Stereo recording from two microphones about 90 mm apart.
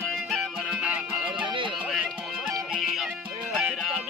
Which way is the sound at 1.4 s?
65° right (ahead or behind).